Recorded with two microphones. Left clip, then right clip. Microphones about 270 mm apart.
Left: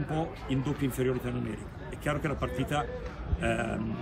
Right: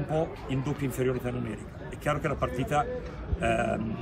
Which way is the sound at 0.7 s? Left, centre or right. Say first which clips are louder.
Right 1 dB; centre.